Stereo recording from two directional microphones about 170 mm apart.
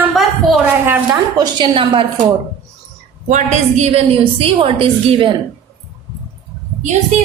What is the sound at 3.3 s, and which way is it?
A woman's voice, 45° right (ahead or behind).